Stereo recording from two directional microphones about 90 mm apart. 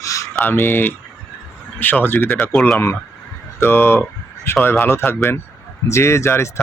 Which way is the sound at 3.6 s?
25° left (ahead or behind).